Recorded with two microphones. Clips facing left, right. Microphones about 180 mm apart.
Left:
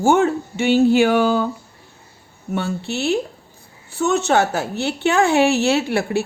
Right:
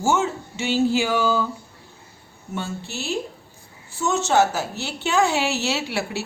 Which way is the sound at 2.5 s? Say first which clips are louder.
Left 7 dB; 65° left (ahead or behind).